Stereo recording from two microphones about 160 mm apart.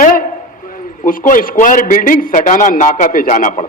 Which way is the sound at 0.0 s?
60° left (ahead or behind).